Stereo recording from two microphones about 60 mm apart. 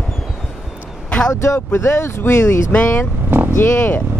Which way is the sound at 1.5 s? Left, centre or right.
Left.